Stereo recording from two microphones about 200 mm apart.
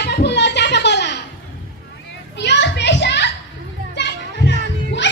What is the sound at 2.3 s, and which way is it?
Children playing, 60° left (ahead or behind).